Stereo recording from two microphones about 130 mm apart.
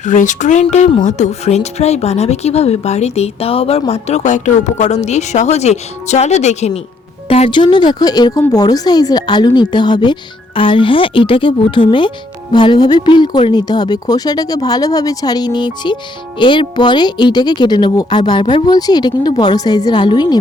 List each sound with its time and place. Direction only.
0.0 s speech: 75° left (ahead or behind); by 6.7 s 60° left (ahead or behind)
7.3 s speech: 50° left (ahead or behind)